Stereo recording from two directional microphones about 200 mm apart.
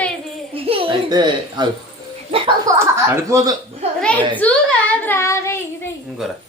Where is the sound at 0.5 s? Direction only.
25° right (ahead or behind).